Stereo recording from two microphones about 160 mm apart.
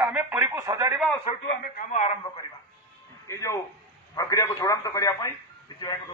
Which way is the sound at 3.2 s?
20° left (ahead or behind).